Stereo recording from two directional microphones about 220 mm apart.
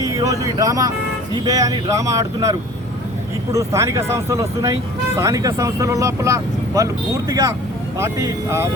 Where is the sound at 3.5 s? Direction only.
15° right (ahead or behind).